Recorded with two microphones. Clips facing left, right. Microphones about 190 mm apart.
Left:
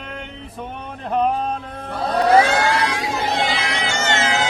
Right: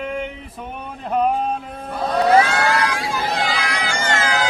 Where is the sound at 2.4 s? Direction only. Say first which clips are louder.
Left 1 dB; 25° left (ahead or behind).